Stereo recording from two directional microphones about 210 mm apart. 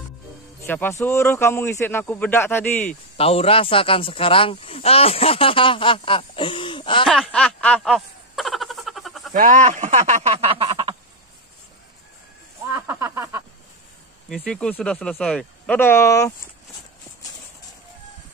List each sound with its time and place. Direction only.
0.6 s speech: 10° left (ahead or behind)
3.2 s speech: 30° left (ahead or behind)
7.1 s snicker: 5° left (ahead or behind)
9.3 s speech: 35° right (ahead or behind)
12.6 s a sound: 10° right (ahead or behind)
14.3 s speech: 5° left (ahead or behind)